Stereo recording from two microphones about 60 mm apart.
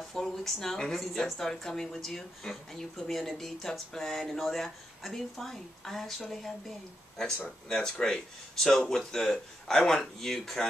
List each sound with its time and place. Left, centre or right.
0.1 s speech: centre
7.2 s speech: centre